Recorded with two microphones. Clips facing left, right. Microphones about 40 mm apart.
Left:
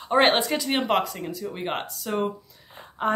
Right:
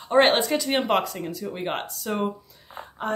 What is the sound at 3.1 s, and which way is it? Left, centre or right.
Speech, centre.